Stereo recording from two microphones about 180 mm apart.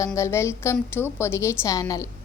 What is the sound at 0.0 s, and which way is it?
A woman's voice, 15° left (ahead or behind).